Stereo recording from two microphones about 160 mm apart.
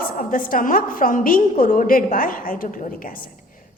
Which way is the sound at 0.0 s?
60° left (ahead or behind).